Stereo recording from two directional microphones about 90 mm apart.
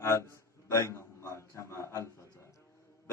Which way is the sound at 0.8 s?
30° left (ahead or behind).